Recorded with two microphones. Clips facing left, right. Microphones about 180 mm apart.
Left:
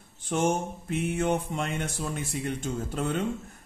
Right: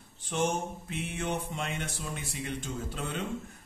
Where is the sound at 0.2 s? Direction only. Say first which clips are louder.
Left 4 dB; 50° left (ahead or behind).